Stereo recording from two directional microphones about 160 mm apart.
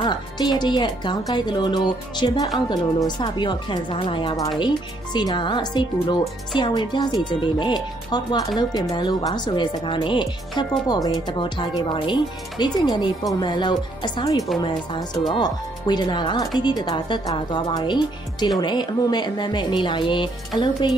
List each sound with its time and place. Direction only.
0.0 s speech: 25° left (ahead or behind)